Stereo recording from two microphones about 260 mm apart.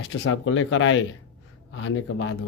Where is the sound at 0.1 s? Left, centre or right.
Left.